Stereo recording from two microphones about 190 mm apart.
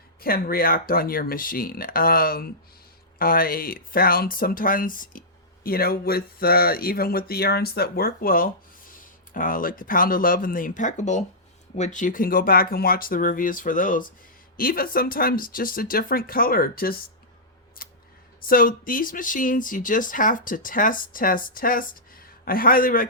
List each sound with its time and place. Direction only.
0.2 s speech: 50° left (ahead or behind)
17.8 s scissors: 50° left (ahead or behind)
18.4 s speech: 45° left (ahead or behind)